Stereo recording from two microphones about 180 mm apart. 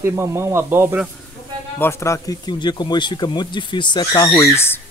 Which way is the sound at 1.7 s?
15° left (ahead or behind).